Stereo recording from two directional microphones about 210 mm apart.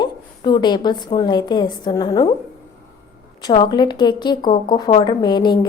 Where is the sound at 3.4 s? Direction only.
20° left (ahead or behind).